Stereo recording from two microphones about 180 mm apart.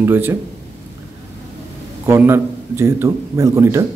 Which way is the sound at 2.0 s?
15° right (ahead or behind).